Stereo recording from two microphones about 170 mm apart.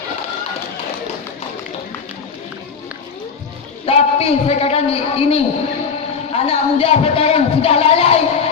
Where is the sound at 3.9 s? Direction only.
35° left (ahead or behind).